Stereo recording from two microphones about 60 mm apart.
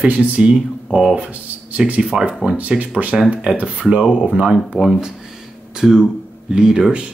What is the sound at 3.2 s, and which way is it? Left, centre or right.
Speech, centre.